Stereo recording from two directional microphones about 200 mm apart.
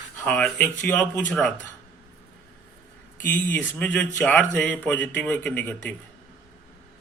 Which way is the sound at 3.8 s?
5° left (ahead or behind).